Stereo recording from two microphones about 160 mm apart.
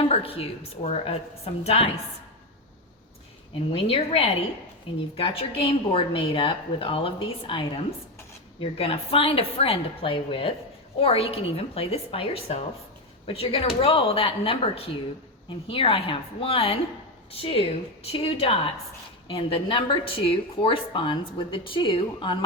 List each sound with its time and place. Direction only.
0.1 s a woman's voice: 35° left (ahead or behind)
3.7 s a woman's voice: 35° left (ahead or behind)